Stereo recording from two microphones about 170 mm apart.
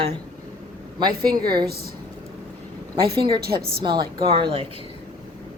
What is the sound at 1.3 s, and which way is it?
Speech, 25° right (ahead or behind).